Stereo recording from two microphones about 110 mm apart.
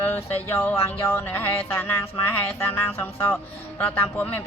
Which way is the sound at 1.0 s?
25° left (ahead or behind).